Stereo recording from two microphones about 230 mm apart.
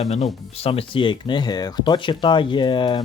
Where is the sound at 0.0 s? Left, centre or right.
Left.